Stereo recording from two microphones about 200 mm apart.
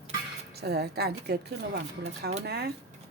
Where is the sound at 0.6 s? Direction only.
55° right (ahead or behind).